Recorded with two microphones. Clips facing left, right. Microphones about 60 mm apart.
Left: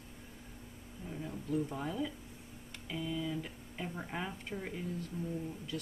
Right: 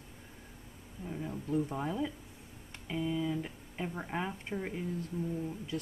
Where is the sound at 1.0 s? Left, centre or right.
Centre.